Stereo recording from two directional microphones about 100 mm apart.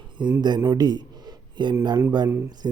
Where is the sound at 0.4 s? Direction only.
45° right (ahead or behind).